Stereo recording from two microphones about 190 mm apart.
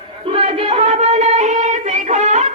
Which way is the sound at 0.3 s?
30° right (ahead or behind).